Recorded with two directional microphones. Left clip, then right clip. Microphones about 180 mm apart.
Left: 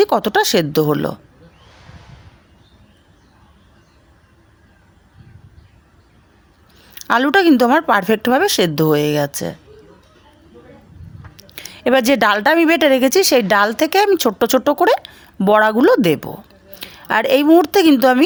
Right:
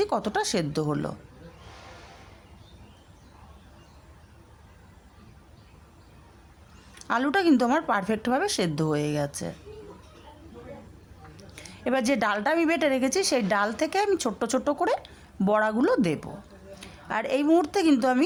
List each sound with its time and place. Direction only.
0.0 s a woman's voice: 35° left (ahead or behind)
6.9 s a woman's voice: 35° left (ahead or behind)
11.3 s a woman's voice: 35° left (ahead or behind)